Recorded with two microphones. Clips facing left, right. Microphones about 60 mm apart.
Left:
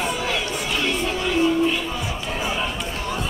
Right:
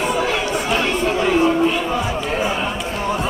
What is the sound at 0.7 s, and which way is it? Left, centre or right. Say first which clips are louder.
Chatter: right 4 dB; right.